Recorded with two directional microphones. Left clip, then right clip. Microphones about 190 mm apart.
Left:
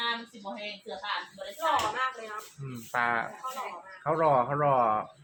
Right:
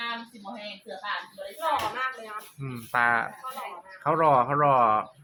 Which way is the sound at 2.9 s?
30° right (ahead or behind).